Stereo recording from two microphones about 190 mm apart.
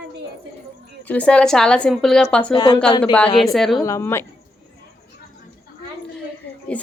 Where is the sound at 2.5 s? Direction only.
20° left (ahead or behind).